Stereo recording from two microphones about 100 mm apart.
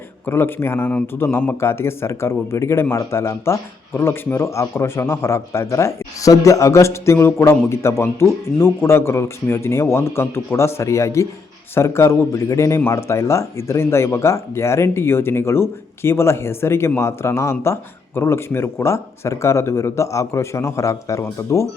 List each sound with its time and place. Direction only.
0.3 s a man's voice: 20° left (ahead or behind)